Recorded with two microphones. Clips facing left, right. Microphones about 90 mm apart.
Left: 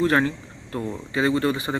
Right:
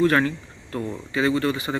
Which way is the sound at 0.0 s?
20° left (ahead or behind).